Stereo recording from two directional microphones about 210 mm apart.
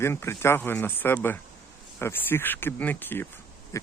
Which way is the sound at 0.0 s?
10° left (ahead or behind).